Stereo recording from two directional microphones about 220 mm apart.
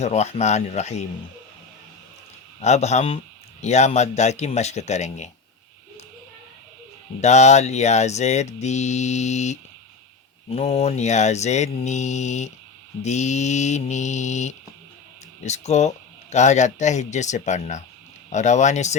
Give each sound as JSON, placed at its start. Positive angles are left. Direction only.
{"t": 0.0, "sound": "speech", "side_deg": 30}
{"t": 2.6, "sound": "speech", "side_deg": 30}
{"t": 7.2, "sound": "speech", "side_deg": 30}